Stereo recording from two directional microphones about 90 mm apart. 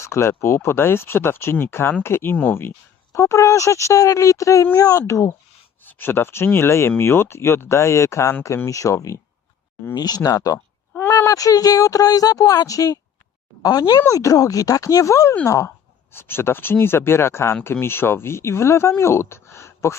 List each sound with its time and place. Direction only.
0.0 s speech: 30° left (ahead or behind)
5.8 s speech: 20° left (ahead or behind)
9.9 s speech: 45° left (ahead or behind)